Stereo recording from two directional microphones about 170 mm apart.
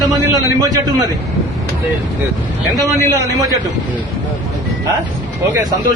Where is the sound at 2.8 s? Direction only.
25° right (ahead or behind).